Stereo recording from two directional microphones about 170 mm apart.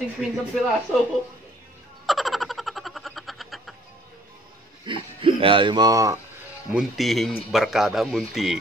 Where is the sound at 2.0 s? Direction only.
Centre (ahead or behind).